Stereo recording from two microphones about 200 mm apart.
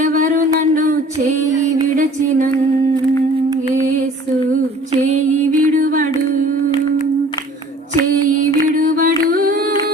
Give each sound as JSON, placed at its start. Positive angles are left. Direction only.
{"t": 0.0, "sound": "music", "side_deg": -35}
{"t": 5.0, "sound": "music", "side_deg": -40}
{"t": 8.7, "sound": "a sound", "side_deg": -40}